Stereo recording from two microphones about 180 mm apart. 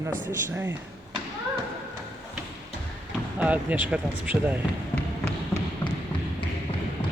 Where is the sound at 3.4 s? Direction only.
10° right (ahead or behind).